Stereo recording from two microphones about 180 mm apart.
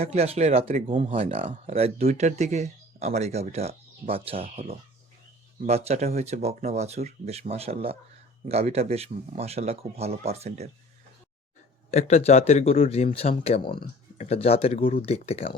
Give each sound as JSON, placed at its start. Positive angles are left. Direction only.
{"t": 0.0, "sound": "speech", "side_deg": -35}
{"t": 11.9, "sound": "speech", "side_deg": 35}